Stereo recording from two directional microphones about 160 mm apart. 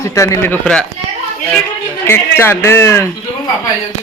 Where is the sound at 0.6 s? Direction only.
5° left (ahead or behind).